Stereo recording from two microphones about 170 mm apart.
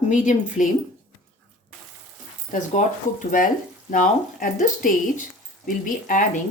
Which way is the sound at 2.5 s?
50° left (ahead or behind).